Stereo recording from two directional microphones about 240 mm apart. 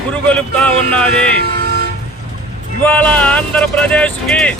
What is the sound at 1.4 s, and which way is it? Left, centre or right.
Toot, right.